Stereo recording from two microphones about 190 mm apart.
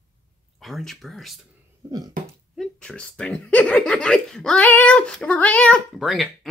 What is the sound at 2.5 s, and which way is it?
Speech, centre (ahead or behind).